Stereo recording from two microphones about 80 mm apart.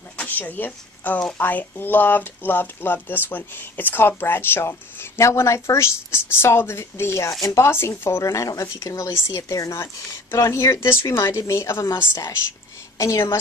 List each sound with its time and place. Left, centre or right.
0.2 s speech: left
12.9 s a woman's voice: left